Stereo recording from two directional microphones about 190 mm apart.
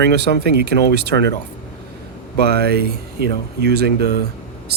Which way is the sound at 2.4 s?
60° right (ahead or behind).